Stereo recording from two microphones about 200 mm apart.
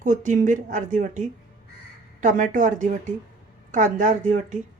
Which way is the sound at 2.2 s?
40° right (ahead or behind).